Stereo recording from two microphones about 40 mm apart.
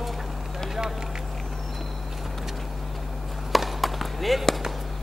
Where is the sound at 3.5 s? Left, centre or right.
Centre.